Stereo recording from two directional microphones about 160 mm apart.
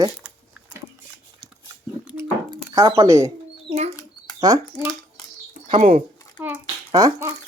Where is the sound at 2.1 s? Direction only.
10° right (ahead or behind).